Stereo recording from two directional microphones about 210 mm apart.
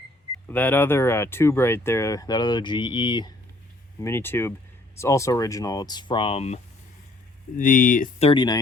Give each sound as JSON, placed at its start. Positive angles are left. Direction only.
{"t": 0.4, "sound": "speech", "side_deg": 10}
{"t": 7.5, "sound": "speech", "side_deg": 40}
{"t": 8.2, "sound": "speech", "side_deg": 25}